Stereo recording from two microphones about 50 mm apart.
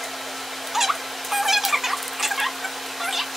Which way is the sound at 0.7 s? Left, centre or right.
Centre.